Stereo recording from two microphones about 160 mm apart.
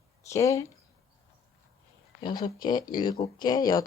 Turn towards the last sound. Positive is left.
turn(degrees=25)  # may be behind; listen again after turning